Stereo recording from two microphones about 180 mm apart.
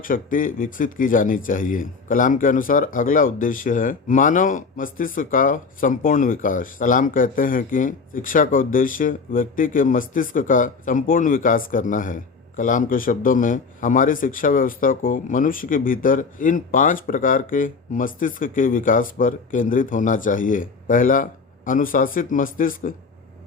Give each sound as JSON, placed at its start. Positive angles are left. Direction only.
{"t": 0.0, "sound": "speech", "side_deg": 50}